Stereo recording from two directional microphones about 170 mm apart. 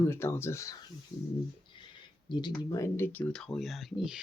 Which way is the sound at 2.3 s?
25° left (ahead or behind).